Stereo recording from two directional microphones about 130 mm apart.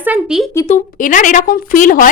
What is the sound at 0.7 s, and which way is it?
A woman's voice, 90° left.